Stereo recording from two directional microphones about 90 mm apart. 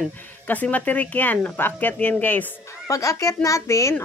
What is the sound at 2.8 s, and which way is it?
A child's voice, 40° left (ahead or behind).